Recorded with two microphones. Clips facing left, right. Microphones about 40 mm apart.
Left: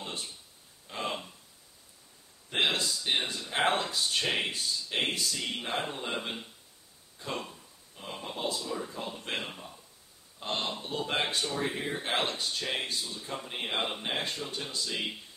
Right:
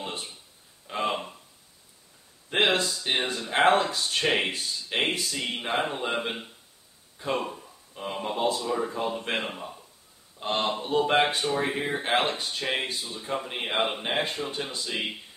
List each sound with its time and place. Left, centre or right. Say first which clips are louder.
0.0 s a sound: right 4 dB; right
2.5 s a sound: right 5 dB; right
2.8 s speech: right 3 dB; right
4.1 s speech: right 6 dB; right
4.5 s speech: right 2 dB; right
7.4 s speech: right 10 dB; right